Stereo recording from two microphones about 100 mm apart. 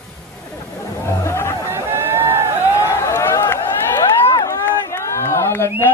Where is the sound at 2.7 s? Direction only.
25° left (ahead or behind).